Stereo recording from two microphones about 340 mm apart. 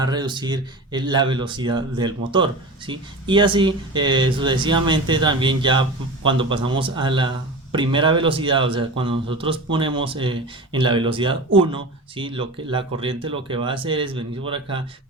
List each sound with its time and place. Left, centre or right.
0.0 s speech: centre